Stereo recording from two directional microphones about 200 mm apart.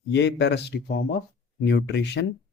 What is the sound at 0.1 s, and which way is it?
Speech, 60° left (ahead or behind).